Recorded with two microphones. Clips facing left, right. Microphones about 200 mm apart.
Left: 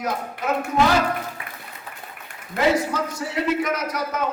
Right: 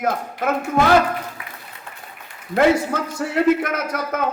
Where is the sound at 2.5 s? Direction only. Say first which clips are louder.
Right 4 dB; 55° right (ahead or behind).